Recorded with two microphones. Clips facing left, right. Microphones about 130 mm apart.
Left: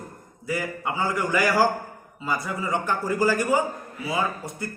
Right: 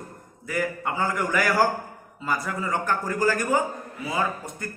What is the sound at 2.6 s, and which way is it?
A man's voice, 10° left (ahead or behind).